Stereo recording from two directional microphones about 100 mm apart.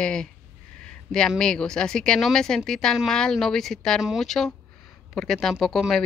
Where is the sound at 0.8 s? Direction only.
5° left (ahead or behind).